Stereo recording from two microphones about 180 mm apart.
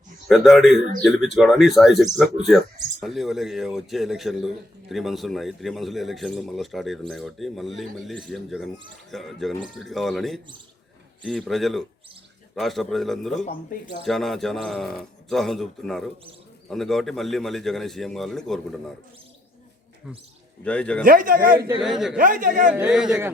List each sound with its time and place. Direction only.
0.3 s a man's voice: centre (ahead or behind)
0.8 s a man's voice: 45° right (ahead or behind)
1.0 s a man's voice: centre (ahead or behind)
13.4 s speech: 50° left (ahead or behind)
14.0 s a man's voice: centre (ahead or behind)
20.7 s speech: 5° left (ahead or behind)
21.0 s a man's voice: 50° right (ahead or behind)
21.8 s a man's voice: centre (ahead or behind)
22.2 s a man's voice: 50° right (ahead or behind)
22.7 s a man's voice: 5° right (ahead or behind)